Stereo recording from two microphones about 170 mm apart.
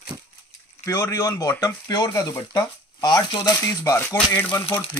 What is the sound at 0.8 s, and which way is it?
Speech, 15° left (ahead or behind).